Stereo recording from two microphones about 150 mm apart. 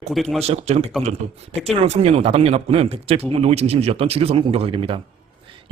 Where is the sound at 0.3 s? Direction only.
40° right (ahead or behind).